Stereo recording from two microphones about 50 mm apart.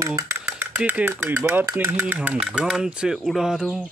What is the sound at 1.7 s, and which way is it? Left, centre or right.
Speech, right.